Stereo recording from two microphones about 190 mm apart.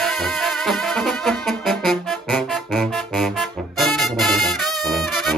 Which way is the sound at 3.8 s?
Centre (ahead or behind).